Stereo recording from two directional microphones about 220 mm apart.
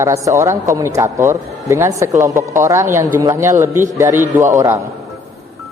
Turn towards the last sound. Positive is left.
turn(degrees=-15)  # may be behind; listen again after turning